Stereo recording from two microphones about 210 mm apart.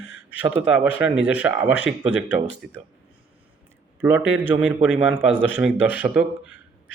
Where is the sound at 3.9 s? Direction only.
5° right (ahead or behind).